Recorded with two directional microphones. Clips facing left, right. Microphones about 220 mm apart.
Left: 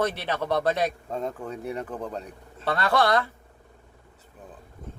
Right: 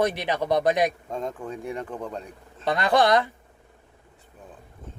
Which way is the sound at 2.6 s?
15° right (ahead or behind).